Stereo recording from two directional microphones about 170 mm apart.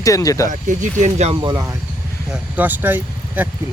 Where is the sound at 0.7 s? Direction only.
45° right (ahead or behind).